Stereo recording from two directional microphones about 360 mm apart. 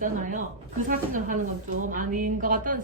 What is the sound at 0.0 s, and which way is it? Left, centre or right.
Speech, right.